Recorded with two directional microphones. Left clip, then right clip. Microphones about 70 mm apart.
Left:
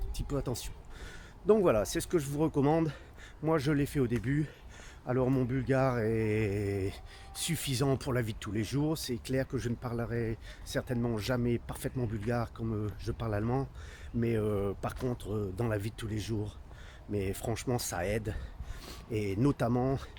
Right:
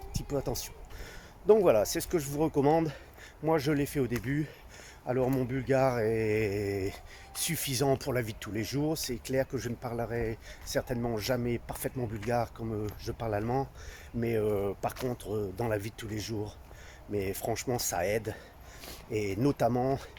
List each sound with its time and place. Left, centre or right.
0.1 s speech: left
5.0 s speech: left